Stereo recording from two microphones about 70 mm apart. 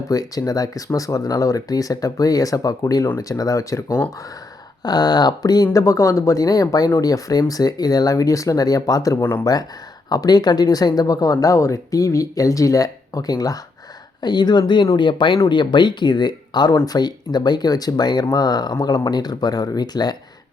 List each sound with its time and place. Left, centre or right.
0.1 s speech: left
4.8 s speech: left
5.7 s speech: left
14.2 s speech: left
16.8 s speech: left